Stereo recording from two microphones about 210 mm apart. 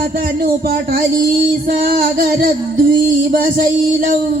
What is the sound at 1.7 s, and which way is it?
Music, 45° right (ahead or behind).